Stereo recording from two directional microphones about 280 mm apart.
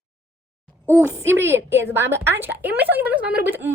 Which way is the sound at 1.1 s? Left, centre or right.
Centre.